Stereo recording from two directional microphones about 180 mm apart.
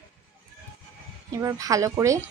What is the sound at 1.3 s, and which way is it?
Speech, 20° right (ahead or behind).